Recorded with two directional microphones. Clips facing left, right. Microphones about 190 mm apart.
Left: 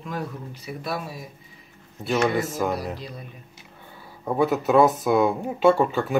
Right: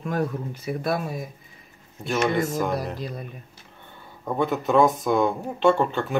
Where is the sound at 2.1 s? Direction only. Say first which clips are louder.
Even; centre (ahead or behind).